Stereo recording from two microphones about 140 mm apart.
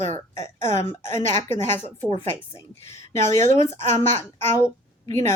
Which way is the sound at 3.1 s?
20° left (ahead or behind).